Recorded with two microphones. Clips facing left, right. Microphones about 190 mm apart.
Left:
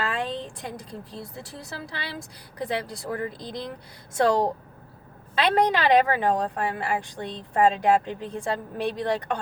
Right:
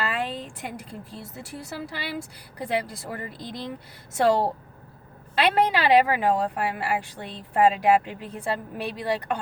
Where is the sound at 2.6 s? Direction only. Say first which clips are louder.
Right 1 dB; 10° right (ahead or behind).